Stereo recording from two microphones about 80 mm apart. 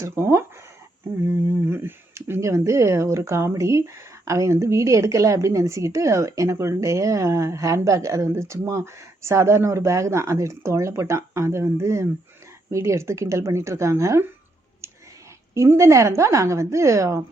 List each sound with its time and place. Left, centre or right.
0.0 s speech: right
15.5 s speech: right